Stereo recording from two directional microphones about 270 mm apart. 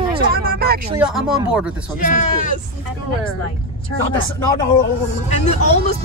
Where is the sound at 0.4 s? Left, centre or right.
Right.